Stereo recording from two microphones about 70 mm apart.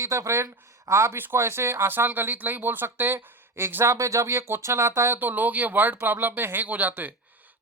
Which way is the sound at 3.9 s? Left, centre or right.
Right.